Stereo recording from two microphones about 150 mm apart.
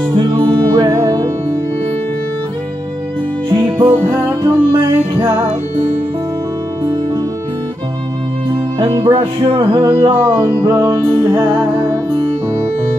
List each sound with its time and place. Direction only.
0.7 s music: 25° right (ahead or behind)
3.4 s music: 30° right (ahead or behind)
4.0 s music: 15° right (ahead or behind)
8.7 s music: 35° right (ahead or behind)
9.6 s music: 15° right (ahead or behind)